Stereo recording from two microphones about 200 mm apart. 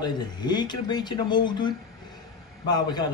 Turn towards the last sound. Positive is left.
turn(degrees=20)  # may be behind; listen again after turning